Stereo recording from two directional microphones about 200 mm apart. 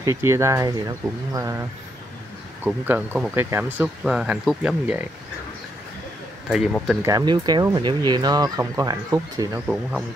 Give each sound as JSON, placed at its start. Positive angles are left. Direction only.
{"t": 0.0, "sound": "speech", "side_deg": -15}
{"t": 6.5, "sound": "speech", "side_deg": 0}
{"t": 7.0, "sound": "speech", "side_deg": -20}